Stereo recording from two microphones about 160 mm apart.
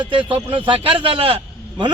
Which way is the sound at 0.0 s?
30° right (ahead or behind).